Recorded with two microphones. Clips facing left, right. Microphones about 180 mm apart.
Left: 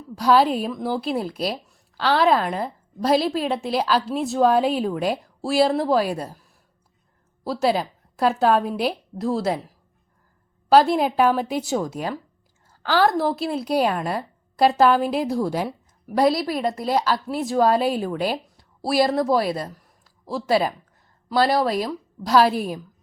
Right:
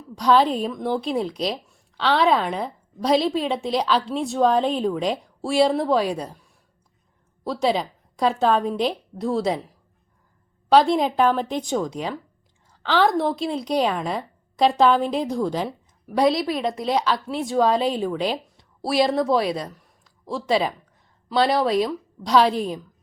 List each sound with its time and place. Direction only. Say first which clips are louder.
0.2 s a woman's voice: even; 5° left (ahead or behind)